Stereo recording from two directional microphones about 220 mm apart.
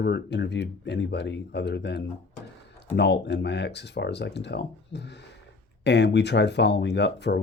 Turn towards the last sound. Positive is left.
turn(degrees=50)  # may be behind; listen again after turning